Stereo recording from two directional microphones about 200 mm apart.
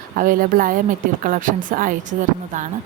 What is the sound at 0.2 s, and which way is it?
A woman's voice, 45° right (ahead or behind).